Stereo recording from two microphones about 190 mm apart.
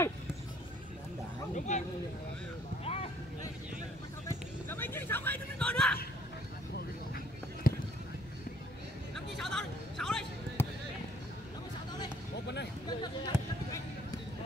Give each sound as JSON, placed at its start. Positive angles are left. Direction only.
{"t": 1.5, "sound": "speech", "side_deg": 40}
{"t": 2.8, "sound": "vehicle", "side_deg": 30}
{"t": 4.6, "sound": "a sound", "side_deg": 10}
{"t": 7.7, "sound": "a sound", "side_deg": 50}
{"t": 9.1, "sound": "basketball bounce", "side_deg": 0}
{"t": 12.8, "sound": "basketball bounce", "side_deg": 25}